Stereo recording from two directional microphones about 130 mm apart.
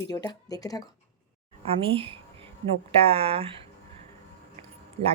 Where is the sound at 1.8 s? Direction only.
45° right (ahead or behind).